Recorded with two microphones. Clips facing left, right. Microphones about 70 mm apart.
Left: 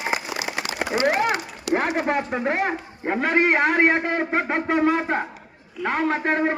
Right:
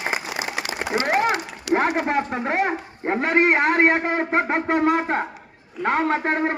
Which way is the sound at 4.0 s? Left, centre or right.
Right.